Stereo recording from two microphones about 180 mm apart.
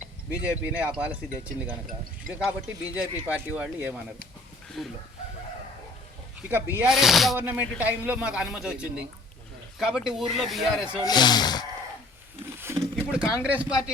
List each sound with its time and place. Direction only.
0.3 s speech: 10° right (ahead or behind)
2.3 s speech: 10° right (ahead or behind)
6.5 s speech: 10° right (ahead or behind)
10.9 s speech: 20° left (ahead or behind)
12.5 s a sound: 15° right (ahead or behind)
12.8 s speech: 5° right (ahead or behind)